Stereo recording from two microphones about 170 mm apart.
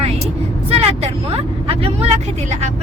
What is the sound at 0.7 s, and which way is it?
Speech, 35° right (ahead or behind).